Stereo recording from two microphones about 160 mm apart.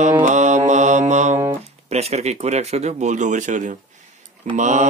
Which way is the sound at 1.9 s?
45° right (ahead or behind).